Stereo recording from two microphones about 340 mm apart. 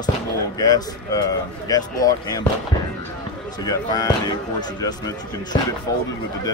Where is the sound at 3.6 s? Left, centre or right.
Centre.